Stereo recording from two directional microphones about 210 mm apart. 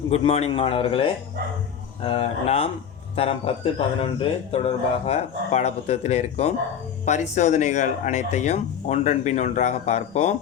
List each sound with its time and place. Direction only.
0.1 s speech: 30° left (ahead or behind)
2.0 s speech: 25° left (ahead or behind)